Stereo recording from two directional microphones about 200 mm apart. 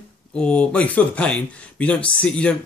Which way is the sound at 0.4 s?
5° left (ahead or behind).